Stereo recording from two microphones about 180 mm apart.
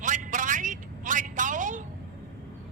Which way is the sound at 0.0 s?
45° right (ahead or behind).